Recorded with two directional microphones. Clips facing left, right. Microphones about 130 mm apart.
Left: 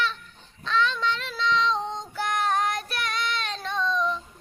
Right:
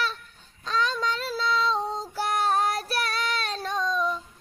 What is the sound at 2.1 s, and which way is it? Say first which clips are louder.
Child singing: right 1 dB; 35° right (ahead or behind).